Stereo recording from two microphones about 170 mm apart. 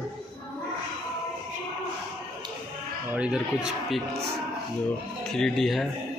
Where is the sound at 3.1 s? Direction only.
5° right (ahead or behind).